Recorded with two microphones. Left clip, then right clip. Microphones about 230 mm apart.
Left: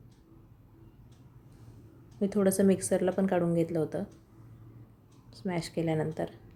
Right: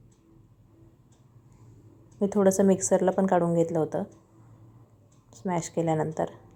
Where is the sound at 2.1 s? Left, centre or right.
Centre.